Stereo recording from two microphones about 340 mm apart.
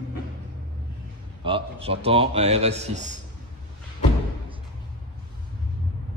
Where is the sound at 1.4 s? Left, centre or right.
Centre.